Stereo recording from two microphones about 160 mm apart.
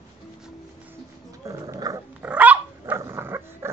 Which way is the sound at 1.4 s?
20° right (ahead or behind).